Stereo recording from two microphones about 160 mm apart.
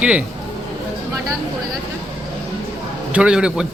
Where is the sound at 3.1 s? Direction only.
5° right (ahead or behind).